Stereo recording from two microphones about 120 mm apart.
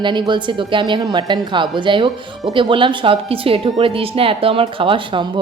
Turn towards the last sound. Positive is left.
turn(degrees=-45)  # may be behind; listen again after turning